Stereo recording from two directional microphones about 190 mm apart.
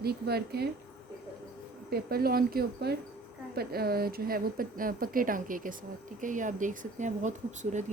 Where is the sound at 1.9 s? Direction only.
50° right (ahead or behind).